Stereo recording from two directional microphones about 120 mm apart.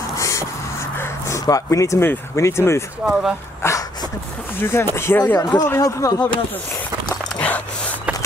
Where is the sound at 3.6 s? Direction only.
30° left (ahead or behind).